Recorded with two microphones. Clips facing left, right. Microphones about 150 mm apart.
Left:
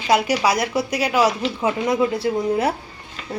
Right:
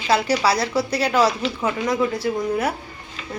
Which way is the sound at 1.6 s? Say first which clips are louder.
Left 2 dB; 25° left (ahead or behind).